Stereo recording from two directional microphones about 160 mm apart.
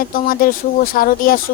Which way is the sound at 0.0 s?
60° left (ahead or behind).